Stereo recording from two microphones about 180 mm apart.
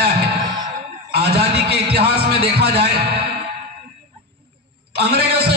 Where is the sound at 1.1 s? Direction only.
65° right (ahead or behind).